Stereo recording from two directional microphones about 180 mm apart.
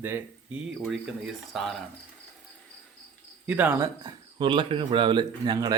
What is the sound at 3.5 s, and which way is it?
Speech, 10° right (ahead or behind).